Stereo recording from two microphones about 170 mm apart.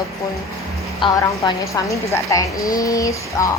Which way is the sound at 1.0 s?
20° left (ahead or behind).